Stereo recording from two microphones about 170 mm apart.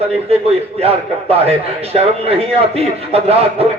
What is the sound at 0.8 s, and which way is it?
A man's voice, 35° right (ahead or behind).